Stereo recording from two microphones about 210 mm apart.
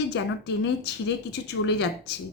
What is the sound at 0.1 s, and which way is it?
A woman's voice, 55° left (ahead or behind).